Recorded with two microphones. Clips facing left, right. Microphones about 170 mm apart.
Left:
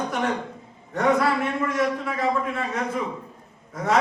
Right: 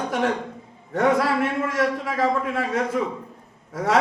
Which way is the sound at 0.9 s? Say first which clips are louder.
Right 1 dB; 90° right.